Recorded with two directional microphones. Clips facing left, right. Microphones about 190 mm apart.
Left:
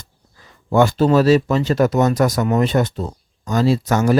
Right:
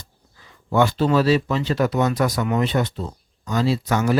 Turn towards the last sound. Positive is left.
turn(degrees=45)  # may be behind; listen again after turning